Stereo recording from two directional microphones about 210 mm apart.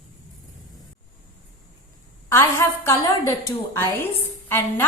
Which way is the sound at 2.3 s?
10° left (ahead or behind).